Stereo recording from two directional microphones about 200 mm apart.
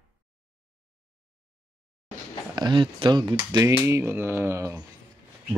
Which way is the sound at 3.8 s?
10° right (ahead or behind).